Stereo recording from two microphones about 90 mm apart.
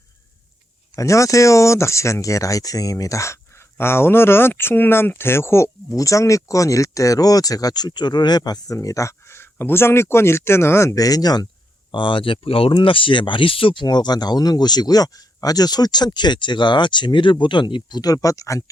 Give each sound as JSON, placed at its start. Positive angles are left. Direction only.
{"t": 0.9, "sound": "speech", "side_deg": 35}
{"t": 11.9, "sound": "speech", "side_deg": 65}
{"t": 13.8, "sound": "speech", "side_deg": 50}